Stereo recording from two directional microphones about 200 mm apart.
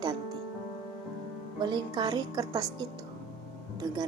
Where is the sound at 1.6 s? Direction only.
20° right (ahead or behind).